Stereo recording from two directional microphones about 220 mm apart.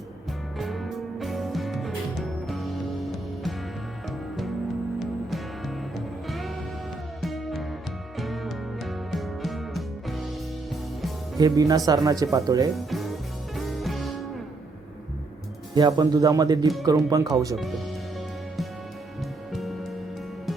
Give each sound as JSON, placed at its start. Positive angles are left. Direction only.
{"t": 0.6, "sound": "music", "side_deg": 0}
{"t": 4.9, "sound": "music", "side_deg": 0}
{"t": 11.3, "sound": "speech", "side_deg": -15}
{"t": 12.7, "sound": "music", "side_deg": 0}
{"t": 15.7, "sound": "speech", "side_deg": -20}
{"t": 19.5, "sound": "music", "side_deg": 0}